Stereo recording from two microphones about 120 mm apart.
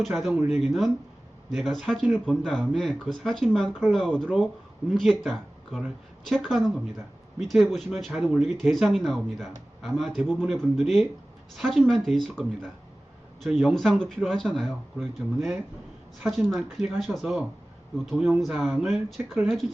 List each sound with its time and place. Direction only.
0.0 s speech: centre (ahead or behind)
13.6 s speech: 5° left (ahead or behind)